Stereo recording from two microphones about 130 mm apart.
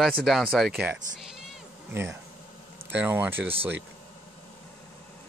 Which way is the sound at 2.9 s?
15° right (ahead or behind).